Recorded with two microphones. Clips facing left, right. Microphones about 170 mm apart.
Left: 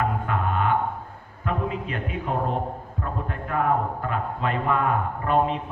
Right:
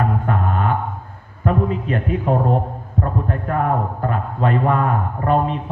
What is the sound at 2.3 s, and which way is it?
A man's voice, 45° right (ahead or behind).